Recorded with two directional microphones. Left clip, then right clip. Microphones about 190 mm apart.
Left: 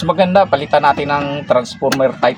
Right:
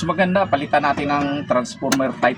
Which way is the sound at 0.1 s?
40° left (ahead or behind).